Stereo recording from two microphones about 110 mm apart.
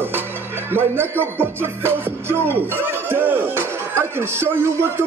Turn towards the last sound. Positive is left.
turn(degrees=-20)  # may be behind; listen again after turning